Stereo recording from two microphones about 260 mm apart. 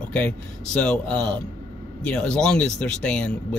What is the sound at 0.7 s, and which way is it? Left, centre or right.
Speech, centre.